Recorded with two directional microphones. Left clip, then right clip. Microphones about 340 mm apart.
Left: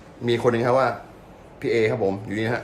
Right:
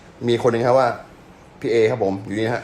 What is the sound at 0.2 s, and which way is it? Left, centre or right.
Speech, centre.